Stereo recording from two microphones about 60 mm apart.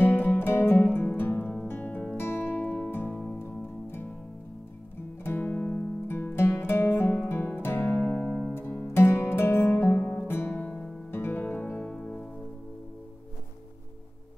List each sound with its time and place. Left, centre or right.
0.0 s music: left
1.7 s music: left
2.1 s music: left
5.2 s music: left
6.0 s music: left
7.8 s music: left
8.5 s music: left
10.6 s music: left
11.8 s music: centre